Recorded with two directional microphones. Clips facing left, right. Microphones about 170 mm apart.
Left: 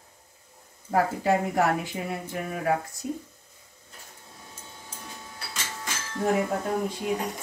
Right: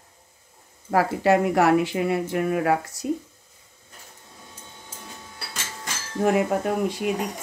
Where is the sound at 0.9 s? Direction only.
85° right.